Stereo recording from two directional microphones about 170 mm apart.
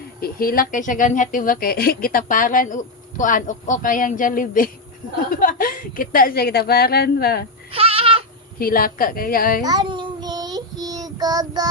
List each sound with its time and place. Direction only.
0.2 s a woman's voice: 60° left (ahead or behind)
7.7 s goat: 35° right (ahead or behind)
8.5 s a woman's voice: 60° left (ahead or behind)
9.6 s child singing: 25° right (ahead or behind)